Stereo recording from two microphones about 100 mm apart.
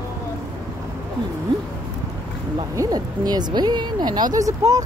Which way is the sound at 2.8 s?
40° right (ahead or behind).